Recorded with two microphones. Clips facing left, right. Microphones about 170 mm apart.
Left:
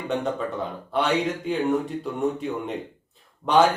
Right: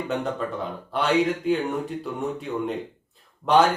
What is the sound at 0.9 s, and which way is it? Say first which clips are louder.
Speech: right 1 dB; centre (ahead or behind).